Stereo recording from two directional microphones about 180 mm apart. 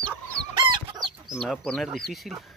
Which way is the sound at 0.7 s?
25° right (ahead or behind).